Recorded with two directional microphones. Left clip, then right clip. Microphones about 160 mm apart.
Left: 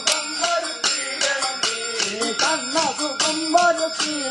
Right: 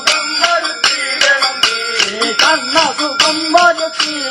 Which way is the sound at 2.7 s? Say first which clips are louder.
Right 9 dB; 5° right (ahead or behind).